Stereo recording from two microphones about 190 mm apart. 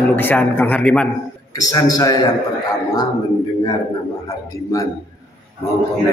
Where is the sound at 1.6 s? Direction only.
20° left (ahead or behind).